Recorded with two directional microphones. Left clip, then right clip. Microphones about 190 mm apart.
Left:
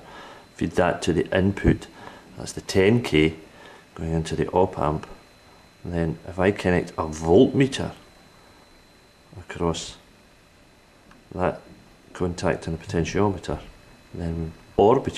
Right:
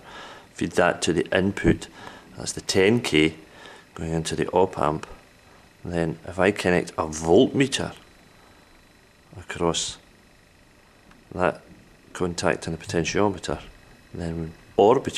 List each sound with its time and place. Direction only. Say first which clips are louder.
0.1 s speech: right 3 dB; centre (ahead or behind)
9.5 s speech: right 2 dB; centre (ahead or behind)
12.1 s speech: right 1 dB; centre (ahead or behind)